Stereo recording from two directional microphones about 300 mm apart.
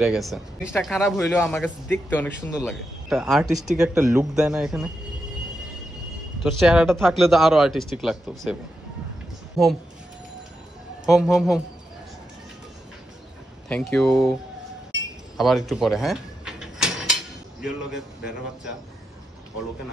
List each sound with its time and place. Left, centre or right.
0.0 s speech: centre
6.4 s speech: centre
11.1 s speech: centre
13.7 s speech: centre
15.3 s sliding door: centre